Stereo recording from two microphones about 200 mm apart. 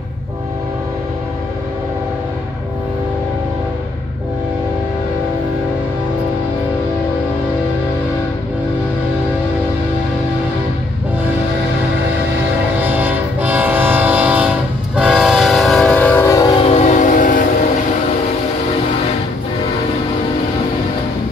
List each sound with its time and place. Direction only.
12.8 s train: 10° right (ahead or behind); by 16.5 s 15° left (ahead or behind)
16.6 s train: 35° left (ahead or behind)